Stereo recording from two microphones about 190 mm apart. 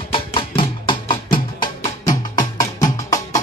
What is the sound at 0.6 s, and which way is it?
Music, 25° left (ahead or behind).